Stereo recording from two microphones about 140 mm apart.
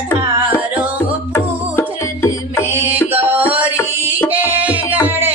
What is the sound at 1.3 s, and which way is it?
Music, 15° left (ahead or behind).